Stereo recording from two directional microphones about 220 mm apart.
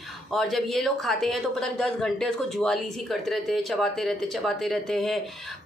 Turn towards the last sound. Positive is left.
turn(degrees=0)  # may be behind; listen again after turning